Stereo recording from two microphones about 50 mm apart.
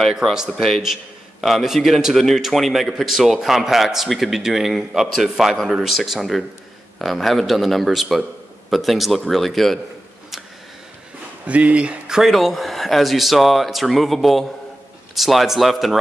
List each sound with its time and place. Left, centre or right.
0.2 s speech: centre
0.6 s a man's voice: centre
1.4 s a man's voice: centre
11.4 s speech: right
12.2 s a man's voice: centre